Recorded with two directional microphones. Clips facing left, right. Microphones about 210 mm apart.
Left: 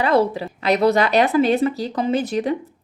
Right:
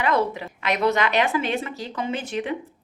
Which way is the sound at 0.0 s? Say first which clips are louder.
Left 5 dB; 35° left (ahead or behind).